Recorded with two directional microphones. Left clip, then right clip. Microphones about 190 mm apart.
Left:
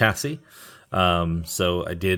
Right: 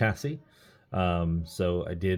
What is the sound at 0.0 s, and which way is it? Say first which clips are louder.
Speech: left 8 dB; 25° left (ahead or behind).